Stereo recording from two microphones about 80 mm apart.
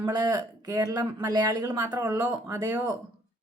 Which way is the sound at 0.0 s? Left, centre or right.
Right.